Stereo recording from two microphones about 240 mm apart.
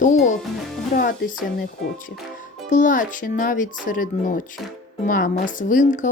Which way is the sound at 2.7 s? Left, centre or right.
Left.